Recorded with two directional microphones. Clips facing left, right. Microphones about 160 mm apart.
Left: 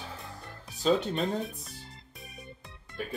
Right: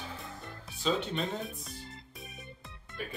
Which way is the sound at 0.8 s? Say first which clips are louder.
Left 5 dB; 40° left (ahead or behind).